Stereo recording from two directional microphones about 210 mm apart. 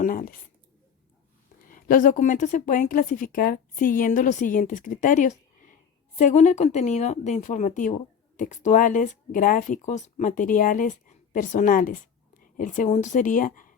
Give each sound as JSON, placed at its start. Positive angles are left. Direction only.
{"t": 0.0, "sound": "speech", "side_deg": 45}
{"t": 1.7, "sound": "a woman's voice", "side_deg": 40}